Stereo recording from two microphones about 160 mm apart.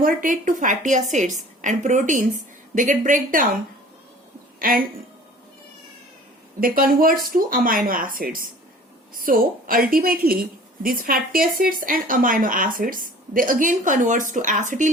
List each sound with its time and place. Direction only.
0.0 s a woman's voice: 60° right (ahead or behind)
4.6 s speech: 65° right (ahead or behind)
6.6 s speech: 65° right (ahead or behind)